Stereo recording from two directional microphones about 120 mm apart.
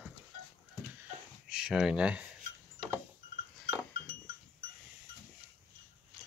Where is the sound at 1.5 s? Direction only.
5° right (ahead or behind).